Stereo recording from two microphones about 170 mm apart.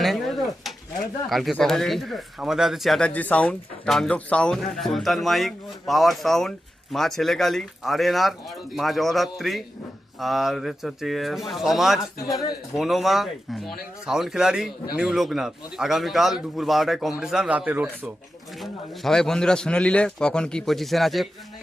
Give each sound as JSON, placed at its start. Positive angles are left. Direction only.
{"t": 0.0, "sound": "pigeon", "side_deg": 0}
{"t": 1.3, "sound": "speech", "side_deg": 0}
{"t": 11.9, "sound": "a man's voice", "side_deg": 20}
{"t": 12.7, "sound": "speech", "side_deg": 0}
{"t": 18.6, "sound": "speech", "side_deg": 0}